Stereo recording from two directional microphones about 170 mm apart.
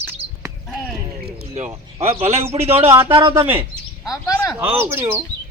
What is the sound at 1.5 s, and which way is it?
Speech, 40° right (ahead or behind).